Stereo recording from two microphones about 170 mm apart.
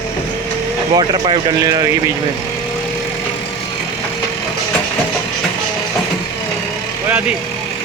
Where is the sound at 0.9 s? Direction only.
25° right (ahead or behind).